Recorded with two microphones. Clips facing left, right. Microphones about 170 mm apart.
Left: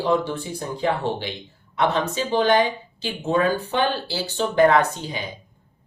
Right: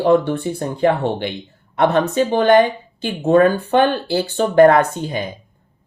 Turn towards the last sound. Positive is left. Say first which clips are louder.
# right 4 dB
turn(degrees=-50)  # may be behind; listen again after turning